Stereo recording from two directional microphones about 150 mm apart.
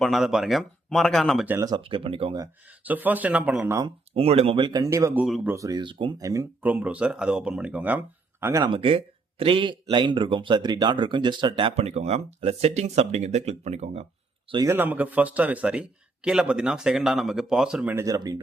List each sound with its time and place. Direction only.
0.0 s speech: centre (ahead or behind)
1.5 s speech: 20° right (ahead or behind)
1.8 s speech: 35° right (ahead or behind)
2.8 s a man's voice: 10° right (ahead or behind)
3.8 s speech: 35° right (ahead or behind); by 5.2 s 20° right (ahead or behind)
5.2 s speech: 5° right (ahead or behind)
5.5 s speech: 25° right (ahead or behind)
6.6 s a man's voice: 10° right (ahead or behind)
8.6 s speech: 35° right (ahead or behind)
11.8 s speech: 45° right (ahead or behind)
14.5 s a man's voice: 20° right (ahead or behind); by 17.9 s 5° right (ahead or behind)
17.9 s speech: 20° right (ahead or behind)